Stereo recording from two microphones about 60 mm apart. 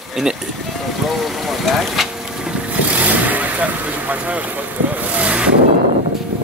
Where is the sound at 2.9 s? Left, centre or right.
Right.